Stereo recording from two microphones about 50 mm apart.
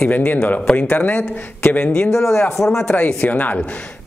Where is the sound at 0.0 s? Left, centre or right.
Left.